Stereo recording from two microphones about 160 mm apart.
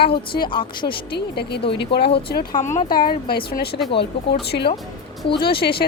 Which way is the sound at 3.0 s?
70° left (ahead or behind).